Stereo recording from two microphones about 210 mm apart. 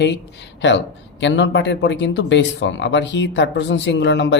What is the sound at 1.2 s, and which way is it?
Speech, 60° left (ahead or behind).